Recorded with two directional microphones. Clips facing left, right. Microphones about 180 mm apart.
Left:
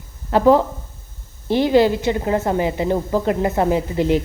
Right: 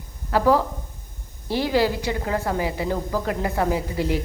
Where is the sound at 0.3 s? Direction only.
25° left (ahead or behind).